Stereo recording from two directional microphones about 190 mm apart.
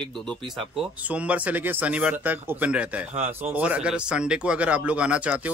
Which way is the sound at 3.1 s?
35° right (ahead or behind).